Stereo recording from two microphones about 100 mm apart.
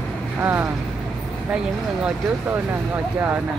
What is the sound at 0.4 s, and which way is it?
Speech, 25° right (ahead or behind).